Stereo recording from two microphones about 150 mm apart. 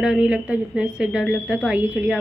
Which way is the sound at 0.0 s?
5° right (ahead or behind).